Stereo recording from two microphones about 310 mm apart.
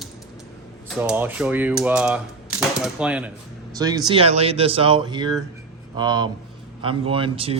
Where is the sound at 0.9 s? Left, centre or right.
Centre.